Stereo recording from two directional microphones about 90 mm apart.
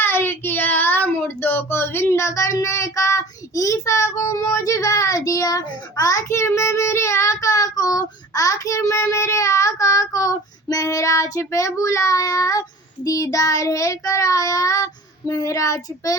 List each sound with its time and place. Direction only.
0.0 s speech: 25° left (ahead or behind); by 12.6 s 40° left (ahead or behind)
13.1 s child singing: 40° left (ahead or behind)